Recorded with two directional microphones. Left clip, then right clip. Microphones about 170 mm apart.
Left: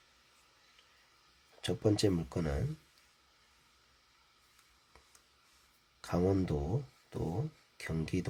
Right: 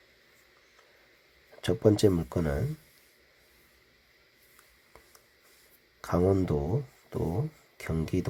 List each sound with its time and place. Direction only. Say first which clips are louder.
1.6 s speech: right 8 dB; 15° right (ahead or behind)
6.0 s speech: right 6 dB; 15° right (ahead or behind)